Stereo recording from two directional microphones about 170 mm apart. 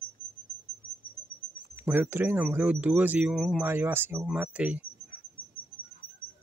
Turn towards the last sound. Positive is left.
turn(degrees=-10)  # may be behind; listen again after turning